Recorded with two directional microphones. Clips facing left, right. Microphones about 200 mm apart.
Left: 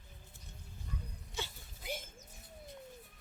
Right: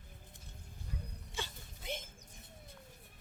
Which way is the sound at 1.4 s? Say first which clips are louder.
Left 1 dB; 5° left (ahead or behind).